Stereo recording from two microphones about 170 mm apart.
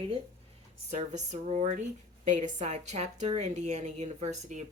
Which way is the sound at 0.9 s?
45° right (ahead or behind).